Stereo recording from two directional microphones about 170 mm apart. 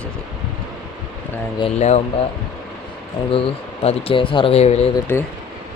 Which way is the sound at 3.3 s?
35° left (ahead or behind).